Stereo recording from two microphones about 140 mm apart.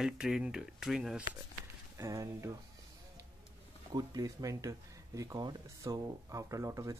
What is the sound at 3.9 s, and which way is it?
Speech, 25° right (ahead or behind).